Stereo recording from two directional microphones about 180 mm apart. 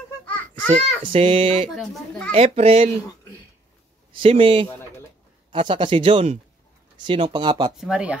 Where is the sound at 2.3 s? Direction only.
30° right (ahead or behind).